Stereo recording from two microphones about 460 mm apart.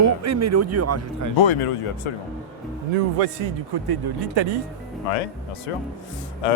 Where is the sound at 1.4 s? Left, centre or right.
Left.